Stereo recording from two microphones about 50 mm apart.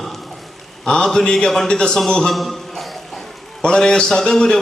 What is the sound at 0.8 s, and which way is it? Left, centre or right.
A man's voice, centre.